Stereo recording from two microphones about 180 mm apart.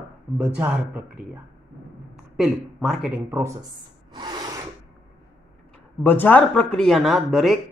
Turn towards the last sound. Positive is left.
turn(degrees=0)  # may be behind; listen again after turning